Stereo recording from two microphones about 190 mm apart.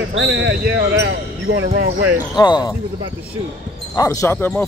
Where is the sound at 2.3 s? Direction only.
20° left (ahead or behind).